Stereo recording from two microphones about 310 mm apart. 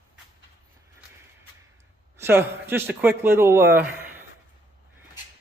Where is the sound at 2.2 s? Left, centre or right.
Centre.